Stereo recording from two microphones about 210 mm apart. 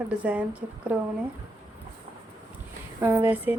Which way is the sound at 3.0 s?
10° right (ahead or behind).